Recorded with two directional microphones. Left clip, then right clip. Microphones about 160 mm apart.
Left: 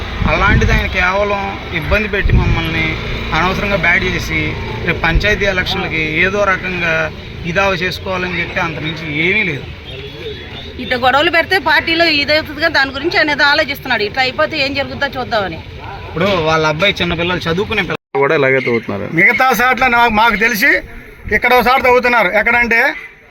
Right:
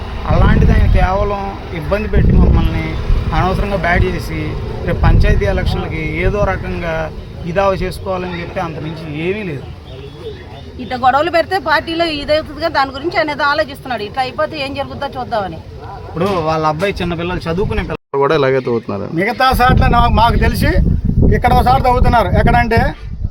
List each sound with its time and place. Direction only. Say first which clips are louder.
0.3 s speech: left 4 dB; centre (ahead or behind)
10.9 s a woman's voice: left 1 dB; 35° right (ahead or behind); by 15.5 s 15° right (ahead or behind)
16.1 s speech: left 3 dB; 20° left (ahead or behind)
18.2 s speech: left 1 dB; 15° right (ahead or behind); by 23.0 s centre (ahead or behind)